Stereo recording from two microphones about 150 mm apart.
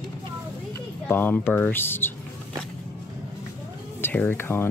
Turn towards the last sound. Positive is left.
turn(degrees=15)  # may be behind; listen again after turning